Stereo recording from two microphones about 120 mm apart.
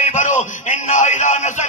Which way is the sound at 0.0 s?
85° left.